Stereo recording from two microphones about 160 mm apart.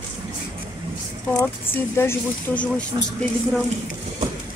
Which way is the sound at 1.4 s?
15° left (ahead or behind).